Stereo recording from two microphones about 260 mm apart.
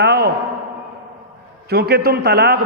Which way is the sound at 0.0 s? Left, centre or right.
Right.